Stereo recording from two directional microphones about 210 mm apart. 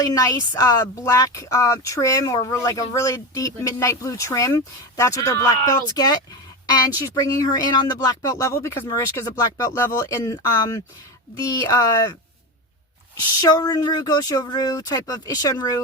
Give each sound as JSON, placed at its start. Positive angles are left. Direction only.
{"t": 0.0, "sound": "speech", "side_deg": 15}
{"t": 6.7, "sound": "speech", "side_deg": 20}
{"t": 13.4, "sound": "speech", "side_deg": 20}